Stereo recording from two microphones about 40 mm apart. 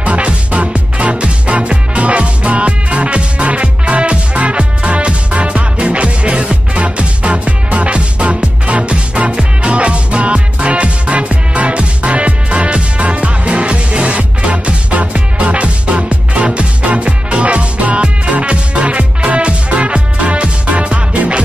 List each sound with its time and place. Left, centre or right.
0.0 s music: right